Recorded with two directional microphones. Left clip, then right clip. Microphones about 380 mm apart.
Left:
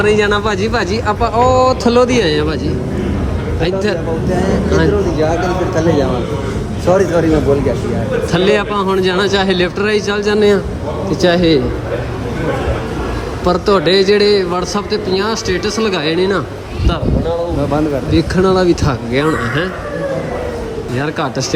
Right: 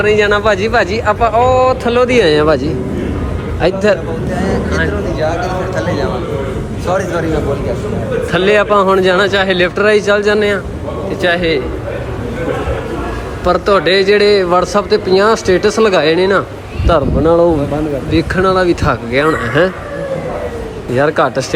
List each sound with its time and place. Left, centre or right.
0.0 s a man's voice: centre
4.4 s vehicle: centre
5.2 s a man's voice: left
6.8 s a man's voice: left
8.3 s a man's voice: centre
13.4 s a man's voice: centre
18.1 s a man's voice: centre
21.0 s a man's voice: centre